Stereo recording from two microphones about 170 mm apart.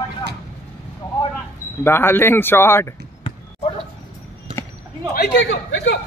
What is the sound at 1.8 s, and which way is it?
Speech, 15° left (ahead or behind).